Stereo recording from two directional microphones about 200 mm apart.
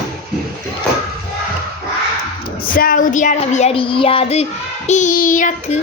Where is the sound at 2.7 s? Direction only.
45° left (ahead or behind).